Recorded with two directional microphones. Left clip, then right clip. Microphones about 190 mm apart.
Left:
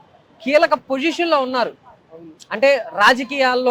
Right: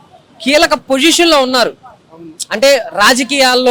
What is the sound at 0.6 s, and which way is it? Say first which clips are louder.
A man's voice: right 7 dB; 30° right (ahead or behind).